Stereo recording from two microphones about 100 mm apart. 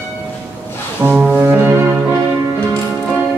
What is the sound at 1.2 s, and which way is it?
Music, 10° right (ahead or behind).